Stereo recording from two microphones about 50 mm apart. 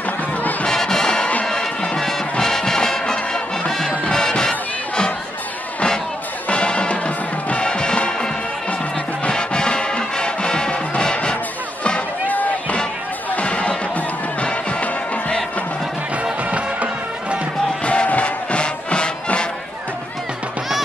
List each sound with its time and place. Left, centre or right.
0.4 s music: left
0.7 s music: centre
6.5 s music: centre
11.8 s music: left
16.4 s music: right
17.8 s music: left